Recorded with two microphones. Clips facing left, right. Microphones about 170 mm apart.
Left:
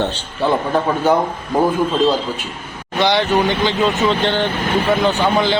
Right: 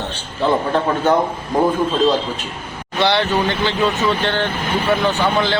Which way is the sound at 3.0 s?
15° left (ahead or behind).